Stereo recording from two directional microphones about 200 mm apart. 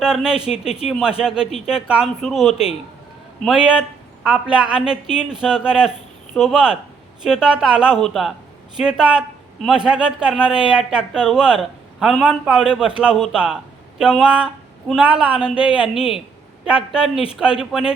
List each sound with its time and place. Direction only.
0.0 s a man's voice: 5° right (ahead or behind)